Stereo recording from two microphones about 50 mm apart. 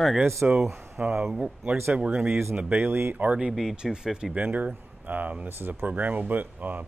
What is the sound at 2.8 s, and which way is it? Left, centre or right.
Speech, right.